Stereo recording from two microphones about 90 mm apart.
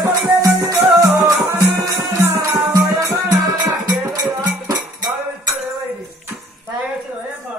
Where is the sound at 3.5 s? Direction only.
50° right (ahead or behind).